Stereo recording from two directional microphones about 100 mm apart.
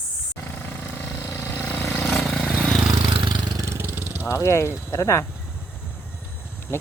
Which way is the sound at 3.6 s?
25° right (ahead or behind).